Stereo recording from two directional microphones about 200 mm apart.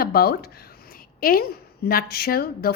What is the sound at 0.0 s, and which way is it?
A woman's voice, 50° left (ahead or behind).